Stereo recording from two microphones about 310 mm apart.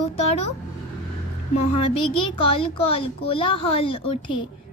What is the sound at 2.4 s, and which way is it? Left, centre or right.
A child's voice, centre.